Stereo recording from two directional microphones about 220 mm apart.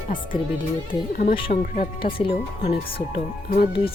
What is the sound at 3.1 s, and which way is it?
Speech, 45° left (ahead or behind).